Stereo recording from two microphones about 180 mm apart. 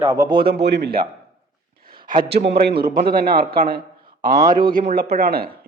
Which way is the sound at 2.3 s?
65° right (ahead or behind).